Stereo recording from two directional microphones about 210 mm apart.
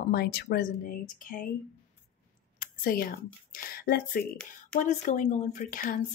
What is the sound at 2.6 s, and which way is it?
Speech, 40° left (ahead or behind).